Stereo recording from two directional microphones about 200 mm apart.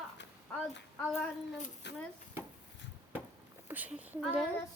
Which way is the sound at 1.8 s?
60° left (ahead or behind).